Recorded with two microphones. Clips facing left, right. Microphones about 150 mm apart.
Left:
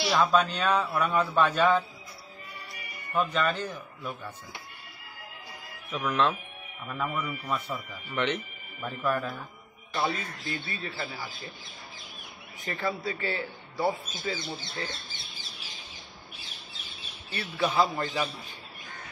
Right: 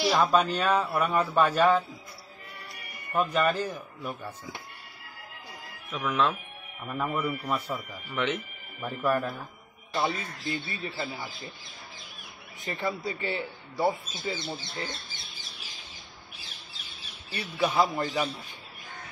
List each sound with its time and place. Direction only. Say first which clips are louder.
0.1 s speech: left 2 dB; 10° right (ahead or behind)
3.1 s speech: right 2 dB; 10° right (ahead or behind)
5.9 s speech: even; centre (ahead or behind)
9.9 s speech: right 1 dB; 25° right (ahead or behind)
12.6 s speech: even; 20° right (ahead or behind)
17.4 s speech: right 1 dB; 10° right (ahead or behind)